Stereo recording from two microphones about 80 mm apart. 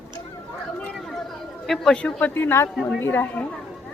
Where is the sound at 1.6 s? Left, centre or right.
Centre.